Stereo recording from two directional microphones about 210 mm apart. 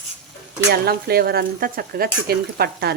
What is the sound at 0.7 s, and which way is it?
Speech, 50° right (ahead or behind).